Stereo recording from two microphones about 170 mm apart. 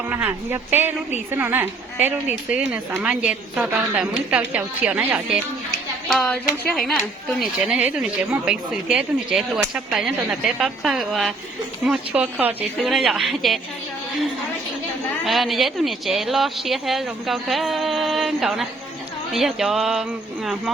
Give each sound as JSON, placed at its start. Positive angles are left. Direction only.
{"t": 0.1, "sound": "a woman's voice", "side_deg": -10}
{"t": 6.1, "sound": "speech", "side_deg": 5}
{"t": 15.2, "sound": "speech", "side_deg": 0}